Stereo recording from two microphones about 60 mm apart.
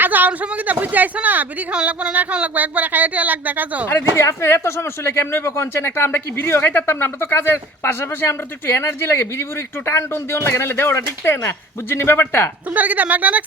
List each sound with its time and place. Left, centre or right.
0.0 s speech: right
1.7 s speech: centre
4.1 s speech: left
12.7 s speech: right